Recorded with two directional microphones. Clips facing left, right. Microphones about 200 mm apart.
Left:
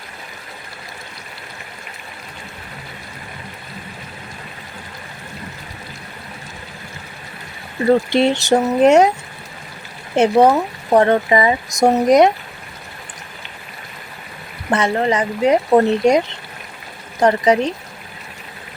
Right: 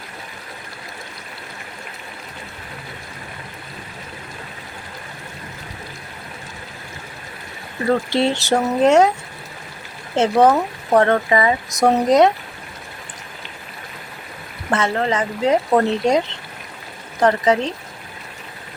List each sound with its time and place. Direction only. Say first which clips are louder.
7.9 s speech: left 4 dB; 15° left (ahead or behind)
10.2 s speech: left 2 dB; 10° left (ahead or behind)
14.7 s speech: left 2 dB; 15° left (ahead or behind)